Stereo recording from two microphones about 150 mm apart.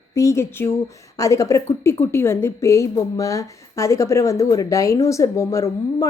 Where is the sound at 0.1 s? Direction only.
20° left (ahead or behind).